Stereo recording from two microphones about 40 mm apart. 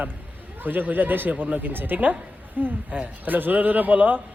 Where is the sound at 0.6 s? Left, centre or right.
Right.